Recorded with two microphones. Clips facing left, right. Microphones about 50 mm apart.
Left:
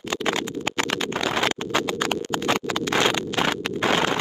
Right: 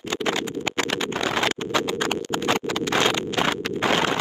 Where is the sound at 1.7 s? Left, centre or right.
Left.